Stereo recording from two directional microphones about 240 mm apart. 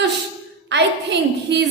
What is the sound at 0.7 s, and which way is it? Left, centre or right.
Speech, right.